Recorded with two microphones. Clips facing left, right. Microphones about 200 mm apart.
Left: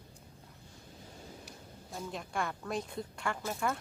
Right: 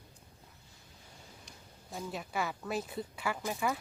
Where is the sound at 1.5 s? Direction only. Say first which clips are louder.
Left 1 dB; centre (ahead or behind).